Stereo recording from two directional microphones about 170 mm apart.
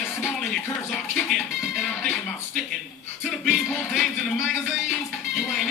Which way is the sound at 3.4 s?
Centre (ahead or behind).